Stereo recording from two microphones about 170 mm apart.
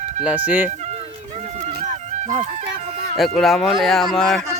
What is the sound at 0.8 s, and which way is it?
Music, 40° right (ahead or behind).